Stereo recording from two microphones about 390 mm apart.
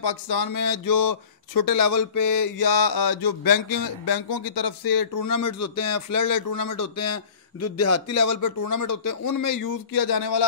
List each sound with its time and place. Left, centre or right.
0.4 s speech: left
4.0 s speech: left